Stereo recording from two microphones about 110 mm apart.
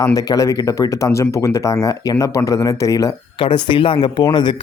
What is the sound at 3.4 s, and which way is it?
Speech, 50° left (ahead or behind).